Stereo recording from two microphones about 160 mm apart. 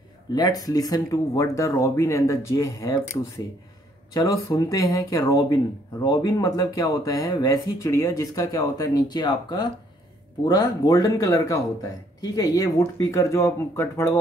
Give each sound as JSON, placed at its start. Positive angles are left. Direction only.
{"t": 0.3, "sound": "speech", "side_deg": 25}